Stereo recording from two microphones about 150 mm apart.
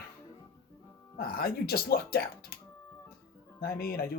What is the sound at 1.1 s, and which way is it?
Speech, 80° left.